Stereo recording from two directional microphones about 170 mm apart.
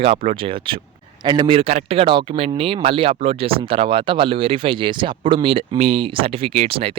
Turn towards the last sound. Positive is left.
turn(degrees=-35)  # may be behind; listen again after turning